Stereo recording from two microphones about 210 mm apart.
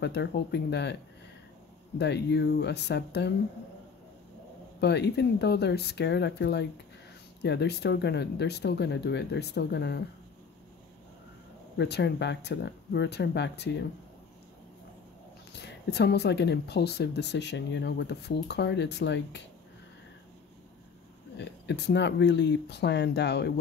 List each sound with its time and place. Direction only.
0.0 s speech: 55° left (ahead or behind)
2.0 s speech: 55° left (ahead or behind)
4.7 s speech: 55° left (ahead or behind)
11.7 s speech: 55° left (ahead or behind)
15.5 s speech: 55° left (ahead or behind)
21.6 s speech: 55° left (ahead or behind)